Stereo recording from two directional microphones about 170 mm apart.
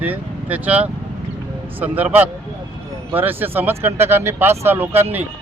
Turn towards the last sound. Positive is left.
turn(degrees=-10)  # may be behind; listen again after turning